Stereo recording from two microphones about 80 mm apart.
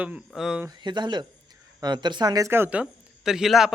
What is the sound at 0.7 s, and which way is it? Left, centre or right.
A man's voice, right.